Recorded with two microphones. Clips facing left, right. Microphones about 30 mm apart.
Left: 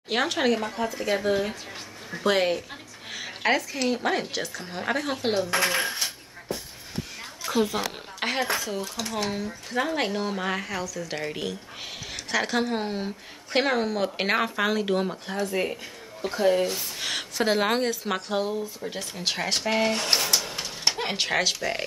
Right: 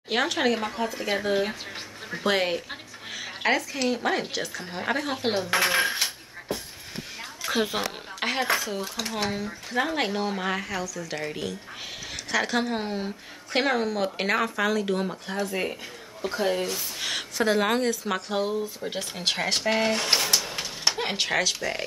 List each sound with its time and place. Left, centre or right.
0.1 s speech: centre
7.4 s a sound: right
8.2 s a woman's voice: centre
14.1 s speech: centre
15.0 s speech: centre
18.4 s speech: centre